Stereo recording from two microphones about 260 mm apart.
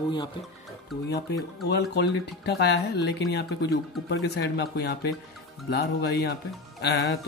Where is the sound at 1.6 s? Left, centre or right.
Left.